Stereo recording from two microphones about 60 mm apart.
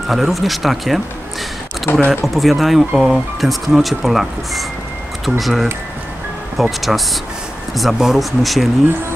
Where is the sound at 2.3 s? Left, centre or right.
Centre.